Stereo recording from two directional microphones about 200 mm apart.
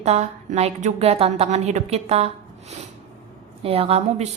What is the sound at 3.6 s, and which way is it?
Speech, 30° right (ahead or behind).